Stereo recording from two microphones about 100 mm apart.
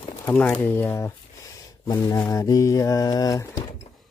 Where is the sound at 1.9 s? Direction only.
40° left (ahead or behind).